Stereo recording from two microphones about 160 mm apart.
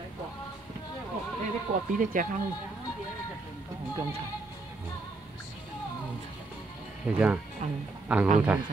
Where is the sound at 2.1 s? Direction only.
60° right (ahead or behind).